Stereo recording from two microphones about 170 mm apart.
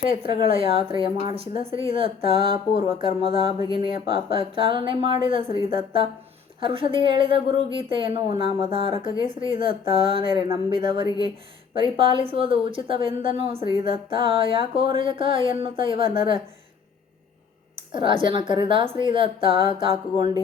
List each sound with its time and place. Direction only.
0.2 s a woman's voice: 30° right (ahead or behind)
17.9 s speech: 30° right (ahead or behind)